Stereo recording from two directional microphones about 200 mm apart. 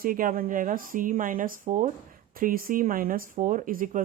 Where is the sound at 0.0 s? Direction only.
45° right (ahead or behind).